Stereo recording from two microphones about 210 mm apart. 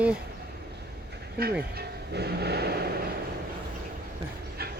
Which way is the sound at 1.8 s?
50° right (ahead or behind).